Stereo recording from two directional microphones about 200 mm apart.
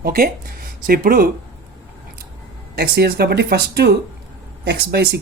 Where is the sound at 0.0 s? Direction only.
50° right (ahead or behind).